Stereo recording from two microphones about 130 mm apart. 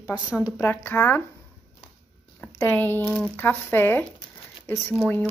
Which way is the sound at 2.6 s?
15° left (ahead or behind).